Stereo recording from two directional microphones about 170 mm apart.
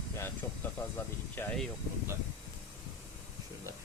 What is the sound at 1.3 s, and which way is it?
Speech, 10° left (ahead or behind).